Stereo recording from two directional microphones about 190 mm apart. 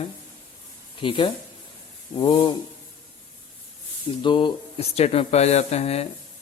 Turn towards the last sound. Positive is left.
turn(degrees=35)  # may be behind; listen again after turning